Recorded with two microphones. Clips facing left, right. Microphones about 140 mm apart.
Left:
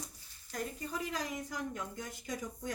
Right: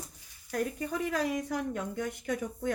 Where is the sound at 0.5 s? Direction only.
65° right (ahead or behind).